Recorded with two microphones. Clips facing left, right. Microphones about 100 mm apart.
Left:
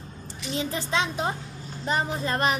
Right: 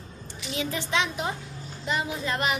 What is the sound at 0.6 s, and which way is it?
Speech, 35° left (ahead or behind).